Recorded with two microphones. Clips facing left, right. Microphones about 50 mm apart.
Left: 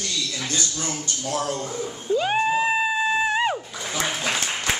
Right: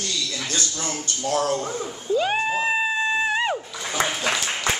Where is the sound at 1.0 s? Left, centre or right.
Right.